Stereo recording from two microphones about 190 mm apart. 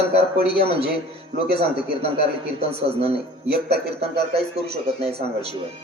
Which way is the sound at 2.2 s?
30° right (ahead or behind).